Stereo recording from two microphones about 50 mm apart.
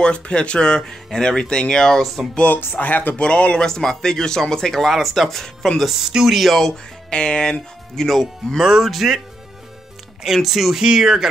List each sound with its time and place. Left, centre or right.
0.0 s speech: centre
2.3 s speech: left
3.2 s speech: left
3.6 s speech: centre
5.8 s speech: centre
7.1 s speech: centre
7.9 s speech: centre
8.5 s speech: centre
10.2 s speech: centre